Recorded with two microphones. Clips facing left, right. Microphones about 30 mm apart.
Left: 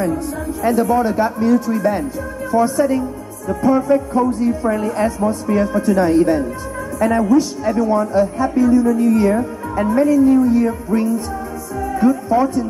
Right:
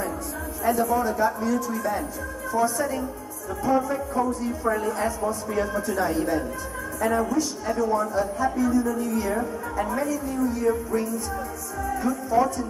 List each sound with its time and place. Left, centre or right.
0.7 s speech: left
2.5 s music: left
3.4 s speech: left
9.8 s music: left